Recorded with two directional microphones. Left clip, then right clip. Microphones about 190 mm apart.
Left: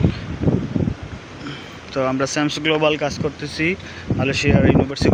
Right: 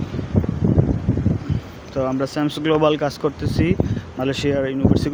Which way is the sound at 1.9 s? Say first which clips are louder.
Left 2 dB; 10° right (ahead or behind).